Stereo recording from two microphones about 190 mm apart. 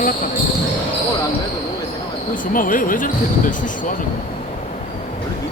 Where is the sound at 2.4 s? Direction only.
45° left (ahead or behind).